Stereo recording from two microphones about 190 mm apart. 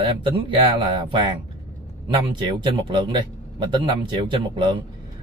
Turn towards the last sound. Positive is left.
turn(degrees=-25)  # may be behind; listen again after turning